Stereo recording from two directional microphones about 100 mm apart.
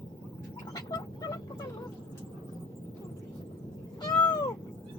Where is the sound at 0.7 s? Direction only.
35° left (ahead or behind).